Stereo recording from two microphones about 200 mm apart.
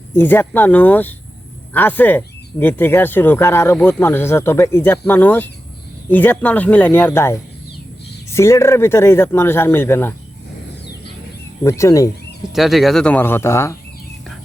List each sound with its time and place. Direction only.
0.1 s speech: 10° left (ahead or behind)
11.6 s speech: 15° left (ahead or behind)
12.5 s speech: centre (ahead or behind)